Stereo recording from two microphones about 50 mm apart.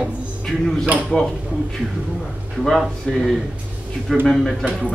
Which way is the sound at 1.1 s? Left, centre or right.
Centre.